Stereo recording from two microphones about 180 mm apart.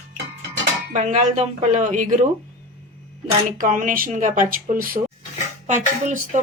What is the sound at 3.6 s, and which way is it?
Speech, 45° right (ahead or behind).